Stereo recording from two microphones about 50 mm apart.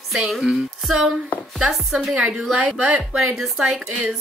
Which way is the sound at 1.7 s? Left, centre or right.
Centre.